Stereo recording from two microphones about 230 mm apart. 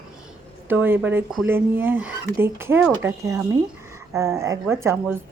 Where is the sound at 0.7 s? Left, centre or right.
Centre.